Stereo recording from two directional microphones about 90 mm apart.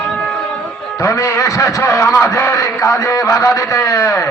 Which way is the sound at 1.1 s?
35° left (ahead or behind).